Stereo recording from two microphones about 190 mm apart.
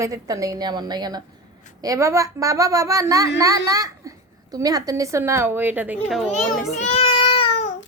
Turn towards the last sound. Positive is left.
turn(degrees=35)  # may be behind; listen again after turning